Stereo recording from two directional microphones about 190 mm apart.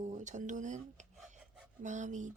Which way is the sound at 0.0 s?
40° right (ahead or behind).